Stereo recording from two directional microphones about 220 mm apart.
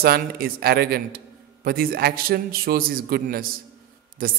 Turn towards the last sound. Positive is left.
turn(degrees=-40)  # may be behind; listen again after turning